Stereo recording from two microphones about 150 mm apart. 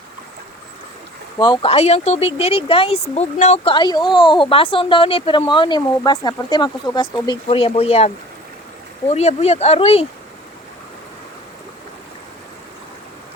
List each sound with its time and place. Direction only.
1.4 s speech: 30° left (ahead or behind)
1.7 s speech: 45° left (ahead or behind); by 7.3 s 30° left (ahead or behind)
7.4 s speech: 40° left (ahead or behind)